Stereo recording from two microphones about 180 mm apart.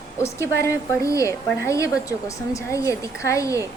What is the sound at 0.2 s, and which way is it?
A woman's voice, 15° left (ahead or behind).